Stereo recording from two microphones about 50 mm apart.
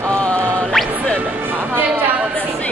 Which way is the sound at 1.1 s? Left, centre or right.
Right.